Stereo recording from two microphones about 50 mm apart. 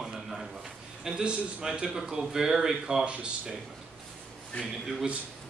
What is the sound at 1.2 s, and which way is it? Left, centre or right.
A man's voice, right.